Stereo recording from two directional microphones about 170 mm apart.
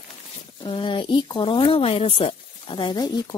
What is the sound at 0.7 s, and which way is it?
A woman's voice, 30° left (ahead or behind).